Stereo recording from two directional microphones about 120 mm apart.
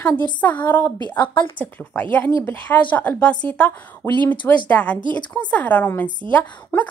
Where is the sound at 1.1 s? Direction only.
40° left (ahead or behind).